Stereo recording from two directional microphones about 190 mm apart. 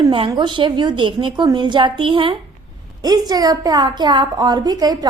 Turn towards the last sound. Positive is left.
turn(degrees=-20)  # may be behind; listen again after turning